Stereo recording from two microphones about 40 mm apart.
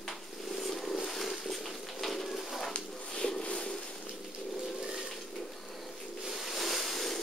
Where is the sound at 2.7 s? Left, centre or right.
Centre.